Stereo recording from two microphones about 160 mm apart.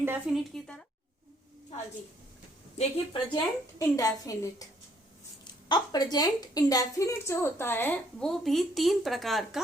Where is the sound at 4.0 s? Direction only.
20° left (ahead or behind).